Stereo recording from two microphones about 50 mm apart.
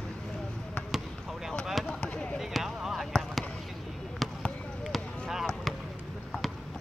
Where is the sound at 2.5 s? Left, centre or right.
Centre.